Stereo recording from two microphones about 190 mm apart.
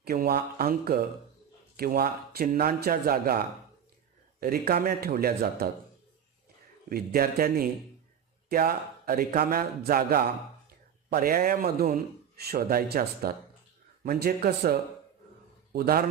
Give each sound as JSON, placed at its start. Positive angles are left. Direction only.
{"t": 0.0, "sound": "a man's voice", "side_deg": -55}
{"t": 6.9, "sound": "a man's voice", "side_deg": -50}